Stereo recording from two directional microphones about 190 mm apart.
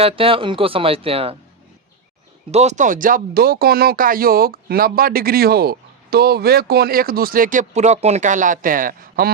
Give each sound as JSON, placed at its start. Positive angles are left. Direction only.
{"t": 0.0, "sound": "speech", "side_deg": -30}
{"t": 2.5, "sound": "speech", "side_deg": -35}